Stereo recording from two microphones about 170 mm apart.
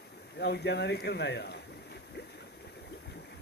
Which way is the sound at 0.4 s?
75° left (ahead or behind).